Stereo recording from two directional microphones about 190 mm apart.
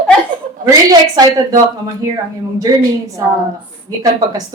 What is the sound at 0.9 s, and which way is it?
A woman's voice, 20° right (ahead or behind).